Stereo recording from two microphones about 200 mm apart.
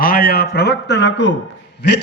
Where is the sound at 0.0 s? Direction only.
45° left (ahead or behind).